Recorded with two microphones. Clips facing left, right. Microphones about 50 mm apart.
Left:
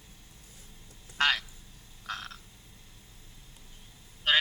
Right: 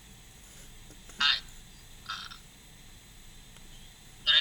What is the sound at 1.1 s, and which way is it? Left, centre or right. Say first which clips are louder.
Quack: left 3 dB; left.